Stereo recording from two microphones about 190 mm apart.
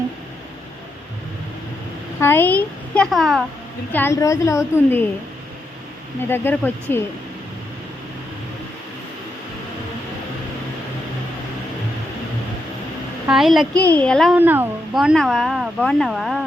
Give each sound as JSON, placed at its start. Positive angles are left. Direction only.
{"t": 2.2, "sound": "a child's voice", "side_deg": 10}
{"t": 3.9, "sound": "a child's voice", "side_deg": 15}
{"t": 6.2, "sound": "a child's voice", "side_deg": 10}
{"t": 13.2, "sound": "speech", "side_deg": 0}
{"t": 14.3, "sound": "speech", "side_deg": -10}